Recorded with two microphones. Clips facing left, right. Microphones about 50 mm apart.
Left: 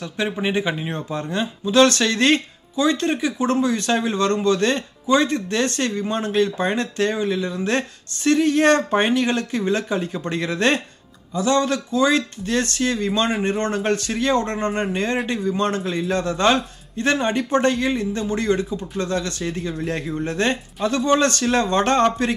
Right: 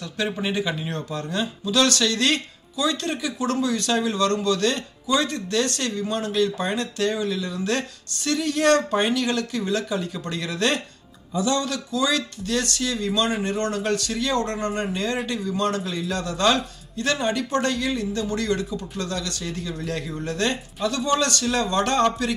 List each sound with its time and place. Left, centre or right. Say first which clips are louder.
0.4 s speech: left 3 dB; left